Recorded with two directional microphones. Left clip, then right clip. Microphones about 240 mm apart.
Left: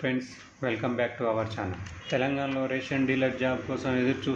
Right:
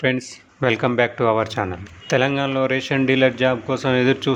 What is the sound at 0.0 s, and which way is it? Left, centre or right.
Speech, right.